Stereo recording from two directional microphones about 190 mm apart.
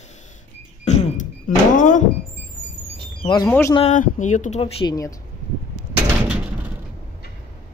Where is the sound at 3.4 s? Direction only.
10° left (ahead or behind).